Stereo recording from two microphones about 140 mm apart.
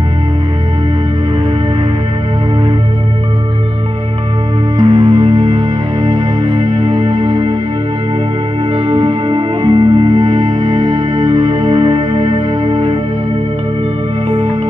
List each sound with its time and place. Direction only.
4.7 s music: 30° right (ahead or behind)
8.7 s music: 40° right (ahead or behind)